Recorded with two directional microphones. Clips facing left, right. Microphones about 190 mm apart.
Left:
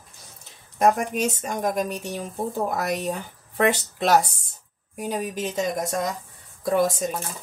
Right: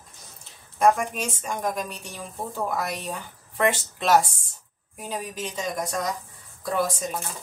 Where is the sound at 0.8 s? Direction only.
40° left (ahead or behind).